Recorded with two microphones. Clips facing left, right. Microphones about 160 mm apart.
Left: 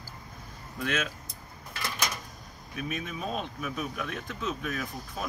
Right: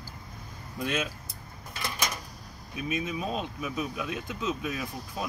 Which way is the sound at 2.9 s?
10° right (ahead or behind).